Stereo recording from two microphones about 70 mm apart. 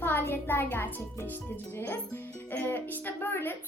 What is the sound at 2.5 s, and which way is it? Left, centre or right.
Speech, left.